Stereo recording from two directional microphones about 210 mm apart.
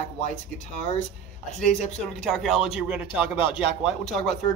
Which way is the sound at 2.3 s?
Centre (ahead or behind).